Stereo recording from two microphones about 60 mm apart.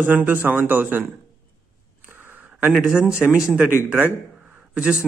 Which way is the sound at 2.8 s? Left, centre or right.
Centre.